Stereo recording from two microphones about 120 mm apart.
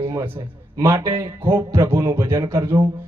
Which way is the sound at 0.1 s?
20° right (ahead or behind).